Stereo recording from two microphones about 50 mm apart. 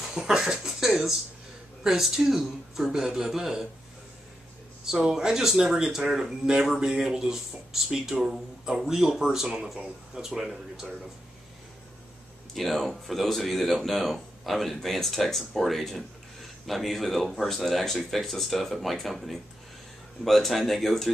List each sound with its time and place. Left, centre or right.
0.0 s speech: centre
4.9 s speech: centre
12.5 s speech: centre